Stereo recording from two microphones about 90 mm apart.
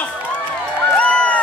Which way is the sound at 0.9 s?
15° left (ahead or behind).